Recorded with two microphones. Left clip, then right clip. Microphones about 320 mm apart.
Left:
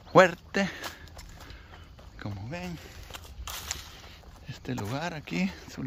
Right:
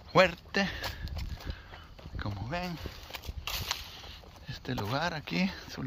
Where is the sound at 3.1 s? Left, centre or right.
Right.